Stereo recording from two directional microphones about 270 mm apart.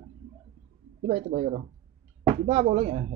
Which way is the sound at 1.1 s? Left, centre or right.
Right.